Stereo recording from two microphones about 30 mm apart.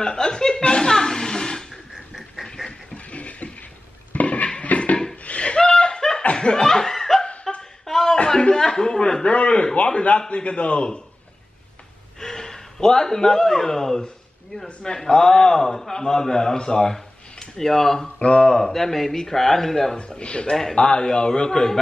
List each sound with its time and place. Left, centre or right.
0.0 s chuckle: left
2.4 s a sound: centre
2.9 s a sound: left
5.4 s laughter: left; by 7.2 s centre
7.5 s a sound: left
9.2 s a sound: left
10.3 s a man's voice: left
12.2 s a man's voice: centre
15.0 s a man's voice: centre
18.2 s a man's voice: left
18.7 s speech: centre
20.2 s a man's voice: left